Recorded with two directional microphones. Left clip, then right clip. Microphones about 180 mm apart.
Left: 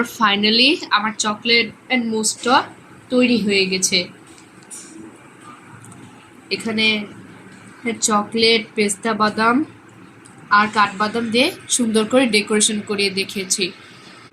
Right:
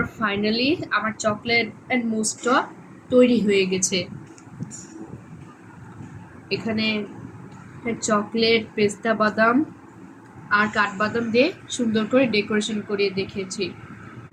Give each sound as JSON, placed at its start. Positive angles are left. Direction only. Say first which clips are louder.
{"t": 0.2, "sound": "a woman's voice", "louder": "left 10 dB", "side_deg": 55}
{"t": 6.5, "sound": "a woman's voice", "louder": "left 6 dB", "side_deg": 50}
{"t": 7.9, "sound": "a woman's voice", "louder": "left 4 dB", "side_deg": 45}